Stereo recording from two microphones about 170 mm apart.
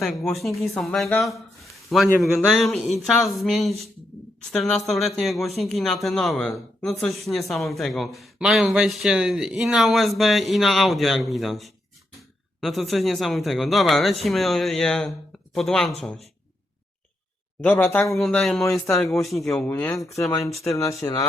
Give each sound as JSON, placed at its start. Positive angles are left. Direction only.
{"t": 0.0, "sound": "a man's voice", "side_deg": 0}
{"t": 1.2, "sound": "a sound", "side_deg": 0}
{"t": 2.2, "sound": "a man's voice", "side_deg": 0}
{"t": 17.6, "sound": "a man's voice", "side_deg": 10}
{"t": 20.5, "sound": "a man's voice", "side_deg": 0}
{"t": 20.7, "sound": "speech", "side_deg": 20}